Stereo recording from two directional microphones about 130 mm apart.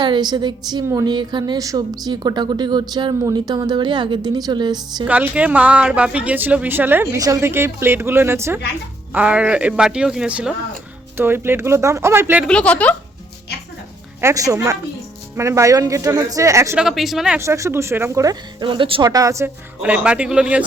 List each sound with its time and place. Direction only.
0.0 s speech: 35° right (ahead or behind)
5.0 s speech: 10° right (ahead or behind)
7.2 s speech: 25° right (ahead or behind); by 10.5 s 5° right (ahead or behind)
11.2 s speech: 15° right (ahead or behind)
12.5 s a woman's voice: 10° left (ahead or behind)
14.2 s speech: 25° right (ahead or behind)
16.7 s speech: 5° right (ahead or behind)
17.3 s speech: 20° right (ahead or behind)
18.7 s speech: 40° right (ahead or behind)
19.0 s speech: 25° right (ahead or behind)
19.8 s speech: 10° right (ahead or behind)